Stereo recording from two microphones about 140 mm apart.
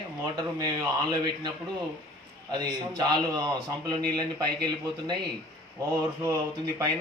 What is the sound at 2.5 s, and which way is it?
A man's voice, 30° right (ahead or behind).